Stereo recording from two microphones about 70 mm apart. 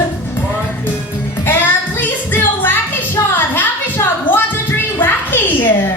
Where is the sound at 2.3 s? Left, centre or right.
Left.